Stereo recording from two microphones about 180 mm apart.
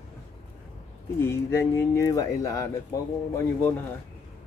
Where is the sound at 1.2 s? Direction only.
15° left (ahead or behind).